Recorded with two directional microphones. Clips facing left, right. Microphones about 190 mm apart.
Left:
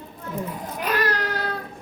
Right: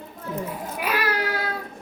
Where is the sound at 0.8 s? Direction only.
10° right (ahead or behind).